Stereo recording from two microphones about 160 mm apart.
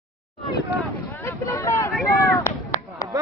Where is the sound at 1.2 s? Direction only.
15° left (ahead or behind).